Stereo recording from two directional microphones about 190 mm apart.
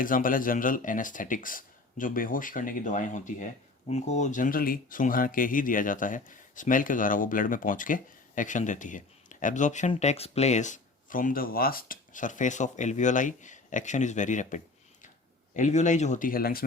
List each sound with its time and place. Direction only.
0.0 s speech: 45° left (ahead or behind)